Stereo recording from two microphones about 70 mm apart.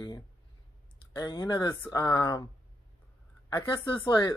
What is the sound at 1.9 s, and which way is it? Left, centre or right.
Speech, left.